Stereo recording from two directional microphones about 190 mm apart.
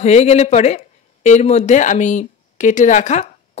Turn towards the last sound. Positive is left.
turn(degrees=40)  # may be behind; listen again after turning